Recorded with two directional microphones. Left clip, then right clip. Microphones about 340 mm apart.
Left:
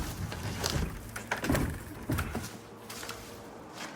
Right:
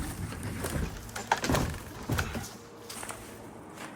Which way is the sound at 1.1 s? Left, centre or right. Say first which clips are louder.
Right 4 dB; right.